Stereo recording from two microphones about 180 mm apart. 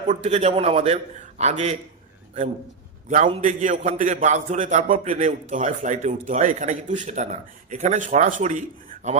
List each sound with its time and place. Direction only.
0.1 s a man's voice: 35° right (ahead or behind)
3.4 s a man's voice: 45° right (ahead or behind)